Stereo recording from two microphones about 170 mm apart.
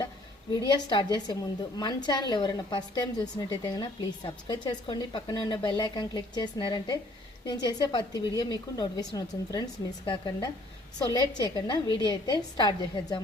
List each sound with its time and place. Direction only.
0.9 s speech: 25° left (ahead or behind)